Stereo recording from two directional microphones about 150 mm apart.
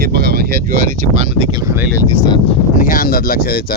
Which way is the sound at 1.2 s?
40° right (ahead or behind).